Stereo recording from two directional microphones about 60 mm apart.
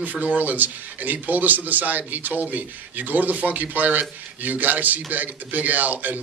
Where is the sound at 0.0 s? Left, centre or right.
Right.